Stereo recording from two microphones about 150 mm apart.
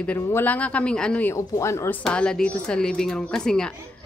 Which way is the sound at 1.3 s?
20° left (ahead or behind).